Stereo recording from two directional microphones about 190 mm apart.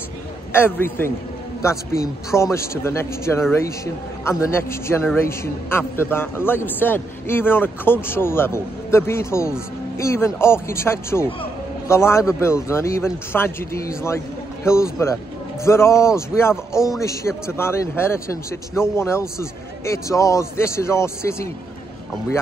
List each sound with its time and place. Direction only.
0.5 s a man's voice: 10° left (ahead or behind)